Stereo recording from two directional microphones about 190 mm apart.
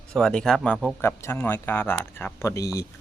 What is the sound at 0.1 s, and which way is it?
Speech, 5° left (ahead or behind).